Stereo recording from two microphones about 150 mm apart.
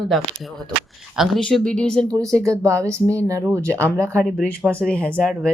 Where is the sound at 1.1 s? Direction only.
Centre (ahead or behind).